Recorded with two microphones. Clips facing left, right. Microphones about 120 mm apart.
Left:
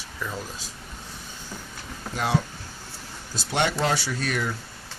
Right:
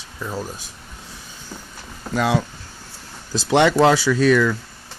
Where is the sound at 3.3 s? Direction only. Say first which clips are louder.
Right 10 dB; 90° right.